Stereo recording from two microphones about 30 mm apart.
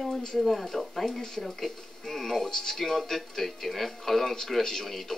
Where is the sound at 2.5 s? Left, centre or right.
Centre.